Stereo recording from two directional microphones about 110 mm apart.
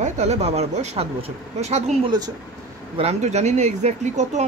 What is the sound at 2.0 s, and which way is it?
Speech, 35° right (ahead or behind).